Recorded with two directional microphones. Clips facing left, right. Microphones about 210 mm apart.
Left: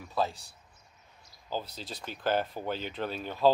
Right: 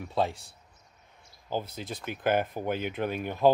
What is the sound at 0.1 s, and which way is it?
Speech, 25° right (ahead or behind).